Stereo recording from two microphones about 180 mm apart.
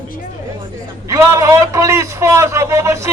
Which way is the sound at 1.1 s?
15° right (ahead or behind).